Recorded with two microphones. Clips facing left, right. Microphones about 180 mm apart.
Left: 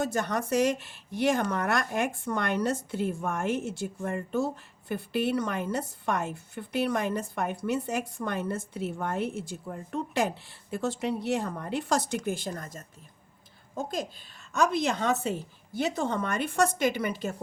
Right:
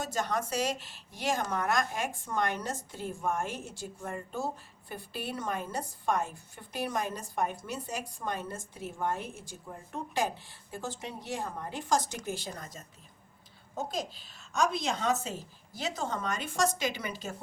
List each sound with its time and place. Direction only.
0.0 s a woman's voice: 60° left (ahead or behind)